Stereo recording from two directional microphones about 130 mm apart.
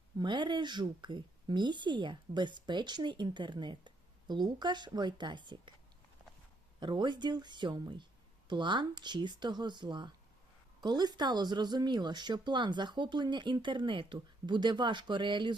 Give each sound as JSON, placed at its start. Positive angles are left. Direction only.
{"t": 0.2, "sound": "speech", "side_deg": -35}
{"t": 6.7, "sound": "speech", "side_deg": -35}